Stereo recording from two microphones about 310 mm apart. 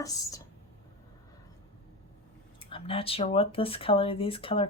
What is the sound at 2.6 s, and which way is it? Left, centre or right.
Speech, centre.